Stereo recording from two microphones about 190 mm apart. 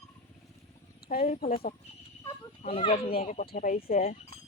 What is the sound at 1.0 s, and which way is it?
Speech, 50° left (ahead or behind).